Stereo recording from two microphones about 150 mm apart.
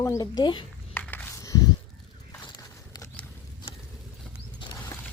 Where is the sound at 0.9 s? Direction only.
15° left (ahead or behind).